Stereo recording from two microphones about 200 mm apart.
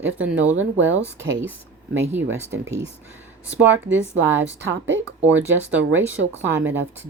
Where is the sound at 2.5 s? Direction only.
65° right (ahead or behind).